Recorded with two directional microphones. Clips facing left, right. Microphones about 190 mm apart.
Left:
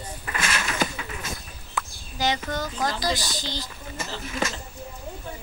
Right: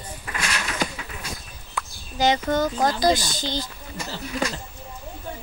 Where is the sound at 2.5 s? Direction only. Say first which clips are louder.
Right 6 dB; 50° right (ahead or behind).